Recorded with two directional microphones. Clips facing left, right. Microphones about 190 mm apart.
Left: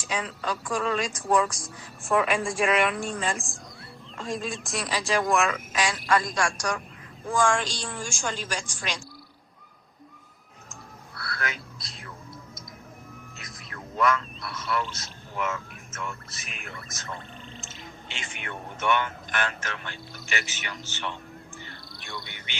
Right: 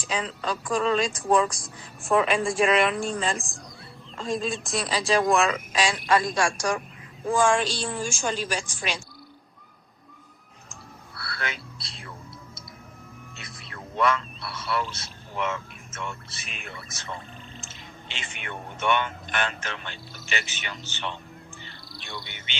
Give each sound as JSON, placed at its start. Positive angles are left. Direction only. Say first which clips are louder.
{"t": 0.0, "sound": "speech", "louder": "right 1 dB", "side_deg": -30}
{"t": 7.6, "sound": "a woman's voice", "louder": "right 5 dB", "side_deg": 15}
{"t": 7.9, "sound": "a woman's voice", "louder": "right 4 dB", "side_deg": -20}
{"t": 11.3, "sound": "a sound", "louder": "even", "side_deg": -30}
{"t": 13.4, "sound": "speech", "louder": "right 1 dB", "side_deg": -30}
{"t": 16.7, "sound": "speech", "louder": "right 1 dB", "side_deg": 0}
{"t": 18.4, "sound": "speech", "louder": "right 1 dB", "side_deg": -25}
{"t": 21.6, "sound": "bird", "louder": "even", "side_deg": -25}